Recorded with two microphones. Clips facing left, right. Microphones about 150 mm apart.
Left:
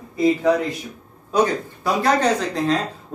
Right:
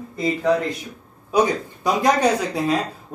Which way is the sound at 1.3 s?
10° right (ahead or behind).